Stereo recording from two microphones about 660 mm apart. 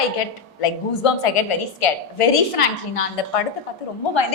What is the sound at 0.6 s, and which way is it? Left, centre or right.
A woman's voice, left.